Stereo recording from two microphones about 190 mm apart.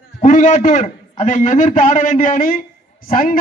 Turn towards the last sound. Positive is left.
turn(degrees=45)  # may be behind; listen again after turning